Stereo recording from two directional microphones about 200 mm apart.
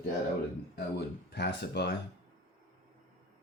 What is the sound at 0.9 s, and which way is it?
Speech, 55° left (ahead or behind).